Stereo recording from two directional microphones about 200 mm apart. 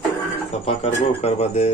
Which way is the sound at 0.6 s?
30° left (ahead or behind).